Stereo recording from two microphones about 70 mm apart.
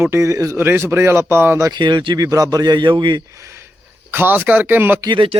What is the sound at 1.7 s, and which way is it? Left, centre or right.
Speech, right.